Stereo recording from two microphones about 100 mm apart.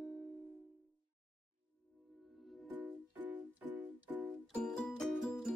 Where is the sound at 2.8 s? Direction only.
15° right (ahead or behind).